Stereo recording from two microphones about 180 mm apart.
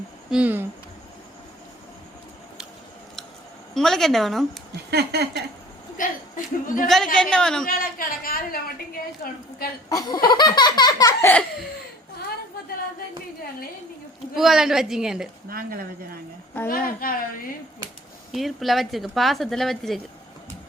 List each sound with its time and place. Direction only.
0.3 s speech: 5° right (ahead or behind)
3.8 s a woman's voice: centre (ahead or behind)
4.7 s speech: 65° right (ahead or behind)
6.0 s a woman's voice: 50° left (ahead or behind)
6.8 s a woman's voice: centre (ahead or behind)
7.7 s a woman's voice: 55° left (ahead or behind)
9.9 s laughter: 20° left (ahead or behind)
14.3 s a woman's voice: centre (ahead or behind)
15.4 s speech: 55° right (ahead or behind)
16.6 s a woman's voice: 55° left (ahead or behind)
18.3 s a woman's voice: centre (ahead or behind)